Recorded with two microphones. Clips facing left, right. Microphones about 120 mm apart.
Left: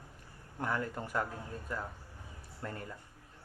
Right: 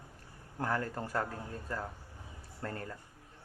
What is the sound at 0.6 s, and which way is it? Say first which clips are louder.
Speech: right 1 dB; 40° right (ahead or behind).